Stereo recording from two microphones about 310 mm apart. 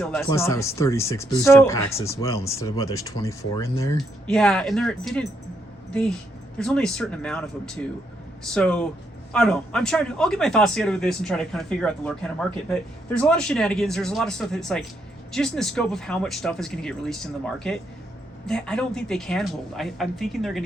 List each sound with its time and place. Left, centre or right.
0.0 s speech: centre